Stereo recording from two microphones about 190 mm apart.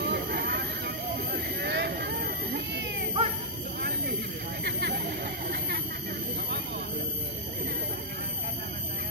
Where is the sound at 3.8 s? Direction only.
55° right (ahead or behind).